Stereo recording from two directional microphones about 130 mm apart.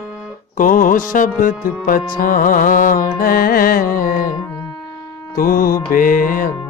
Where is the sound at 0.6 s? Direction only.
90° left.